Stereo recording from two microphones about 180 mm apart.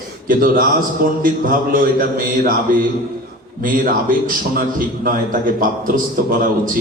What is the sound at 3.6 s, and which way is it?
A man's voice, 50° right (ahead or behind).